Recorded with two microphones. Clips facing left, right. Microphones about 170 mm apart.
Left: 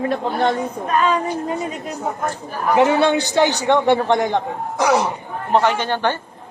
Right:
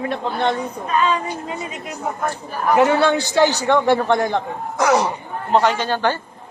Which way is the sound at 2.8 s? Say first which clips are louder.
Left 1 dB; 20° left (ahead or behind).